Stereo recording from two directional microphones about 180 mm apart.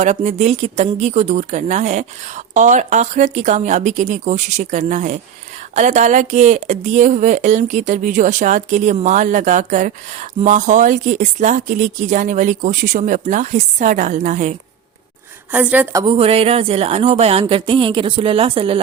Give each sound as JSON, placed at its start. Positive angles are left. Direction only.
{"t": 0.0, "sound": "speech", "side_deg": -40}
{"t": 15.5, "sound": "a woman's voice", "side_deg": -10}
{"t": 16.0, "sound": "a woman's voice", "side_deg": -30}